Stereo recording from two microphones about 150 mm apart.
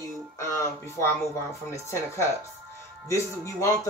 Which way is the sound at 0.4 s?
20° left (ahead or behind).